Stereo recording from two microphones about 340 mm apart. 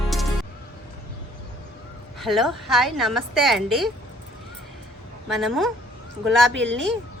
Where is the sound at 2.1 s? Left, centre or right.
Centre.